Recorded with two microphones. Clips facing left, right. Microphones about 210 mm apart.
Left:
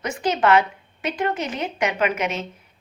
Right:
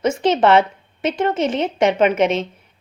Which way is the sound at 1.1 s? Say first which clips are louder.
Right 6 dB; 25° right (ahead or behind).